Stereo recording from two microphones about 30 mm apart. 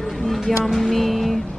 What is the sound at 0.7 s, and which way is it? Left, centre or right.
Music, centre.